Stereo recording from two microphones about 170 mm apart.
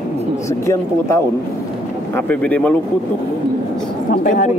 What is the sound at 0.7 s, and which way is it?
Speech, 15° left (ahead or behind).